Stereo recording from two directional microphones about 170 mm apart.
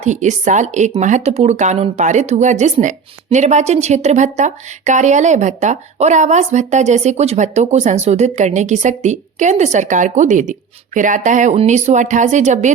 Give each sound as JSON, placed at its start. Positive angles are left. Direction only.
{"t": 0.0, "sound": "speech", "side_deg": -45}